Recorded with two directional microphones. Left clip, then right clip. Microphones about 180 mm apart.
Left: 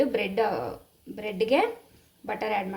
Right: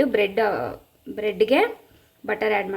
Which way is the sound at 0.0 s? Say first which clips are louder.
Right 5 dB; 40° right (ahead or behind).